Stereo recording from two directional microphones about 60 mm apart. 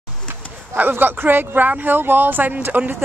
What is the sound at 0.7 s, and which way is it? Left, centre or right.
Speech, right.